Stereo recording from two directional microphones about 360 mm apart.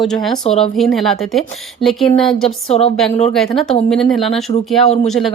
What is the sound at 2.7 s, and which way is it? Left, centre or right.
Speech, centre.